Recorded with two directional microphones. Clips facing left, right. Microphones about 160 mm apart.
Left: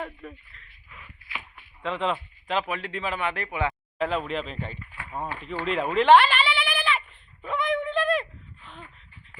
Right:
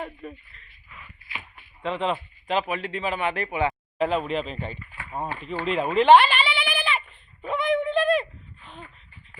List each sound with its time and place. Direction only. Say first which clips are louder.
0.0 s speech: right 1 dB; 15° right (ahead or behind)
1.8 s speech: right 1 dB; 5° right (ahead or behind); by 5.5 s 20° right (ahead or behind)
5.6 s speech: right 2 dB; centre (ahead or behind)
7.4 s a sound: right 3 dB; 10° right (ahead or behind)